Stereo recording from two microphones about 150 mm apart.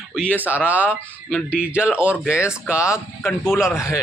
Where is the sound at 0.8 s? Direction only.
5° left (ahead or behind).